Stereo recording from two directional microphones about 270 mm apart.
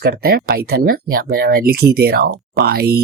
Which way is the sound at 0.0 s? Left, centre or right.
Right.